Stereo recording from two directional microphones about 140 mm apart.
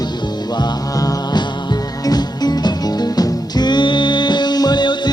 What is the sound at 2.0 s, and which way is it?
Music, 30° left (ahead or behind).